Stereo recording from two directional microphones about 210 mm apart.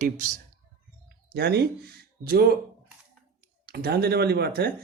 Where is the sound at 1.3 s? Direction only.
50° right (ahead or behind).